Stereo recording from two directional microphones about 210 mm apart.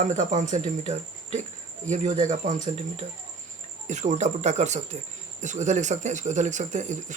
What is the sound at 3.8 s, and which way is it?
Speech, 35° right (ahead or behind).